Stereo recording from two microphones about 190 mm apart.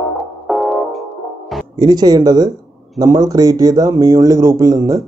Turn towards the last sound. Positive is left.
turn(degrees=-15)  # may be behind; listen again after turning